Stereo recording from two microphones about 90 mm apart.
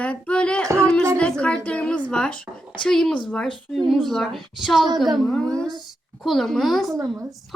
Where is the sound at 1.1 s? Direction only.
10° left (ahead or behind).